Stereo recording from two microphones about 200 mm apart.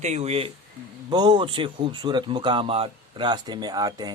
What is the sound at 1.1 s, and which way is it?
Speech, 20° right (ahead or behind).